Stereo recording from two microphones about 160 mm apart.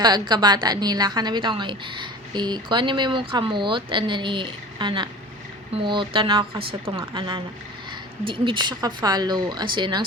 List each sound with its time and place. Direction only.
0.0 s a woman's voice: 25° right (ahead or behind)